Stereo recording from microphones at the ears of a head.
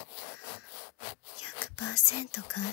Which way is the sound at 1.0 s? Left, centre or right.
Left.